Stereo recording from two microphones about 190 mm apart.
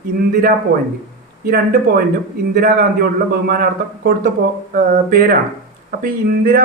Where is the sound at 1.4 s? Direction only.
50° right (ahead or behind).